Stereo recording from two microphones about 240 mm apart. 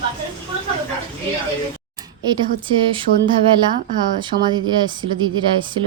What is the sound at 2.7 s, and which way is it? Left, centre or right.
Speech, right.